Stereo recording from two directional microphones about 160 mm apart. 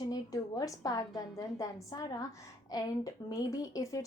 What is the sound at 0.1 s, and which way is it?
A woman's voice, 20° left (ahead or behind).